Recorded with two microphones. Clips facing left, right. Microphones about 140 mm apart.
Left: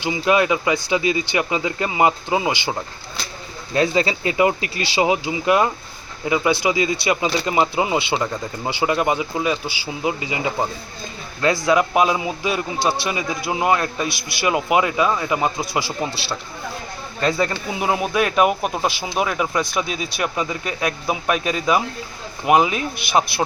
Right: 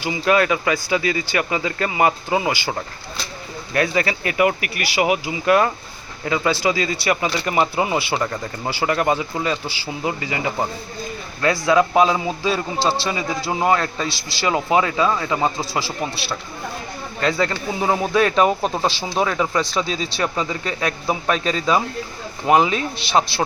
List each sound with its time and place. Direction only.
0.0 s speech: 20° left (ahead or behind)
11.6 s speech: 15° left (ahead or behind)
17.2 s speech: 20° left (ahead or behind)